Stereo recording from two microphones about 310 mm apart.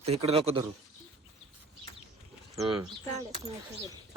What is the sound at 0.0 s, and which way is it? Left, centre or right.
Speech, centre.